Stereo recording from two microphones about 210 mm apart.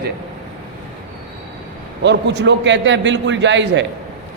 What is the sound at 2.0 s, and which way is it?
A man's voice, 55° right (ahead or behind).